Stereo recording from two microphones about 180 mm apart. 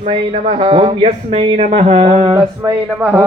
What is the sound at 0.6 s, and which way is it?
A man's voice, 30° right (ahead or behind).